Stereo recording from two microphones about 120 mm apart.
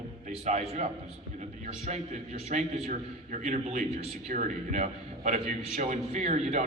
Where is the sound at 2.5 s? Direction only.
85° right.